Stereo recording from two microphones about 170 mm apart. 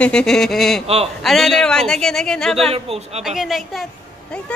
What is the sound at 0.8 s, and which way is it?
Speech, 35° right (ahead or behind).